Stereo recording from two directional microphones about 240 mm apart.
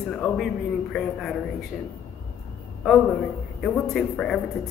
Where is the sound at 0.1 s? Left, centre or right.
Centre.